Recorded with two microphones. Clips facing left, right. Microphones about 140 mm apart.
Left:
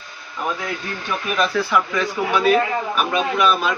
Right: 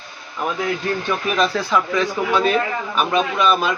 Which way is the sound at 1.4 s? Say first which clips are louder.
Left 1 dB; 20° right (ahead or behind).